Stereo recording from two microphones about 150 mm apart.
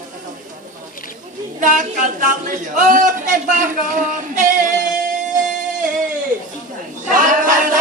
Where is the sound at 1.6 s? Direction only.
60° right (ahead or behind).